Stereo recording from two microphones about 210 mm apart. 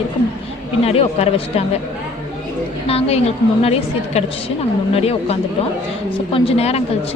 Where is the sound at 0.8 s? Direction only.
30° left (ahead or behind).